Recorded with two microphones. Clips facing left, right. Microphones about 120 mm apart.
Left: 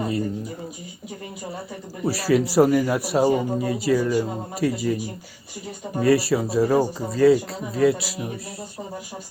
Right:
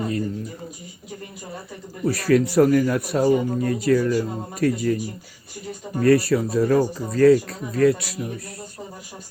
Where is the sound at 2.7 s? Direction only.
20° left (ahead or behind).